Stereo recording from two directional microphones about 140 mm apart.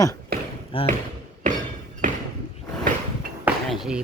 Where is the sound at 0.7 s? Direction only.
40° left (ahead or behind).